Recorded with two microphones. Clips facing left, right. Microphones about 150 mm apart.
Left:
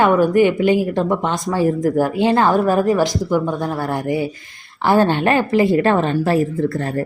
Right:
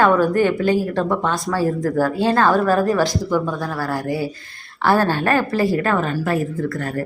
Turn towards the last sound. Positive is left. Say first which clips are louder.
# left 3 dB
turn(degrees=30)  # may be behind; listen again after turning